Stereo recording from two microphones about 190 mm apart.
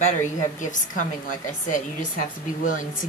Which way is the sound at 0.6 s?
40° left (ahead or behind).